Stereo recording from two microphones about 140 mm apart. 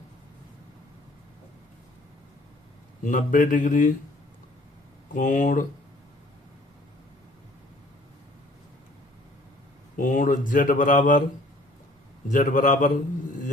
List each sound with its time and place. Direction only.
3.0 s speech: 70° left (ahead or behind)
5.1 s speech: 65° left (ahead or behind)
10.0 s speech: 70° left (ahead or behind)
12.3 s speech: 70° left (ahead or behind)